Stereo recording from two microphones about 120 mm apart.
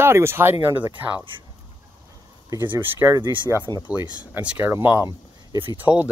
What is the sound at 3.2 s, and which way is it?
Speech, 40° right (ahead or behind).